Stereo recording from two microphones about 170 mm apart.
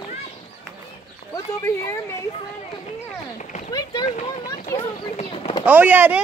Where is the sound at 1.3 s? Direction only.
15° left (ahead or behind).